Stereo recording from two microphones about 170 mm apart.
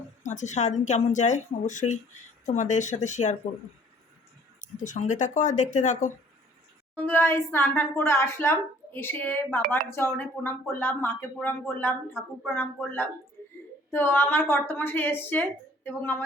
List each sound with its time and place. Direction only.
0.2 s a woman's voice: 45° left (ahead or behind)
4.6 s a woman's voice: 45° left (ahead or behind)
6.9 s speech: 10° left (ahead or behind)